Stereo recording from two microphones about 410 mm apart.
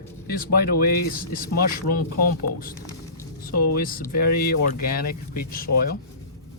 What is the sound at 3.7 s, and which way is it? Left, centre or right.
Speech, left.